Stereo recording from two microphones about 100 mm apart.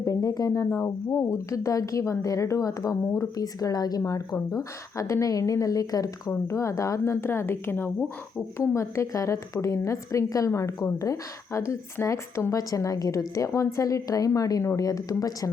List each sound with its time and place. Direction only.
0.0 s a woman's voice: 35° left (ahead or behind)